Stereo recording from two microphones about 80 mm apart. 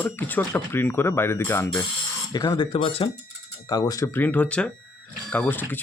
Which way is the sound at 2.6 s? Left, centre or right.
Left.